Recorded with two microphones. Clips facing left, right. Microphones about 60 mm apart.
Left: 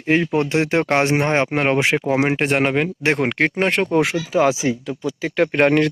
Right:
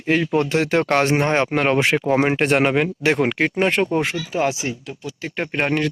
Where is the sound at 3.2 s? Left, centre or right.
Left.